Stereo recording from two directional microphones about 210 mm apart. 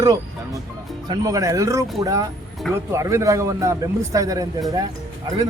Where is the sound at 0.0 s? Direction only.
15° right (ahead or behind).